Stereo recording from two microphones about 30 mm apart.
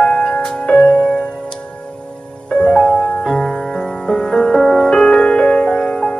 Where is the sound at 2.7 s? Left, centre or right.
Left.